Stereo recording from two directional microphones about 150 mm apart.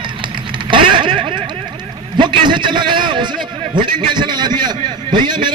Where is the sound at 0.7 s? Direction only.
35° right (ahead or behind).